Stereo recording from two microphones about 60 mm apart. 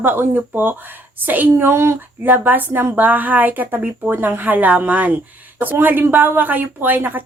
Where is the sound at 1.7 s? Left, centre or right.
Right.